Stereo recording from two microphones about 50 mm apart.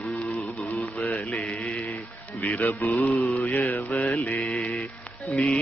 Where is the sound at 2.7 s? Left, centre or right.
Left.